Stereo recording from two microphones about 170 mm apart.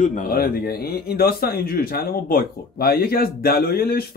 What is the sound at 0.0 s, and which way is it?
Speech, 55° left (ahead or behind).